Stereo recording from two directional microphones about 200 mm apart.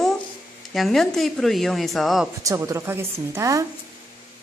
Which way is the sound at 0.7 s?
Centre (ahead or behind).